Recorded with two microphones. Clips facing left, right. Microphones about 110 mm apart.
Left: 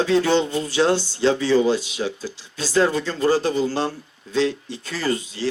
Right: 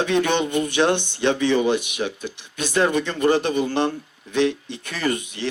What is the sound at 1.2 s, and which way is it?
Speech, 65° right (ahead or behind).